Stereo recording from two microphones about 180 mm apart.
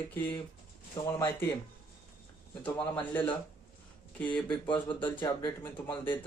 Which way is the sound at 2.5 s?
10° left (ahead or behind).